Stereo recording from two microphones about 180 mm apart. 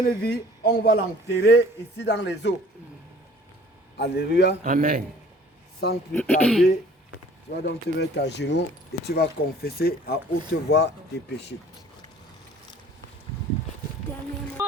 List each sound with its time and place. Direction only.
0.2 s speech: 60° left (ahead or behind)
3.9 s a man's voice: 65° left (ahead or behind)
4.6 s a man's voice: 50° right (ahead or behind)
5.8 s a man's voice: 65° left (ahead or behind)
6.1 s speech: 5° left (ahead or behind)
7.5 s speech: 70° left (ahead or behind)